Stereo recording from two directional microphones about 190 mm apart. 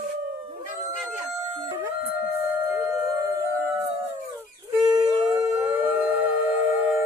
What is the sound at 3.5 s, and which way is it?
Howl, 15° right (ahead or behind).